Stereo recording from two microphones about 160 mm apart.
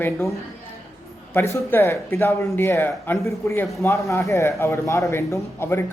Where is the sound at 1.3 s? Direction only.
15° left (ahead or behind).